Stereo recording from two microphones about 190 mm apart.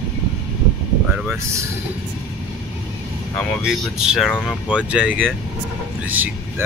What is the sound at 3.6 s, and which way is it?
Speech, 5° right (ahead or behind).